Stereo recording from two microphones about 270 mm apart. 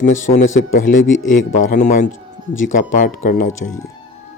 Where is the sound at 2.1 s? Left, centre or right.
Left.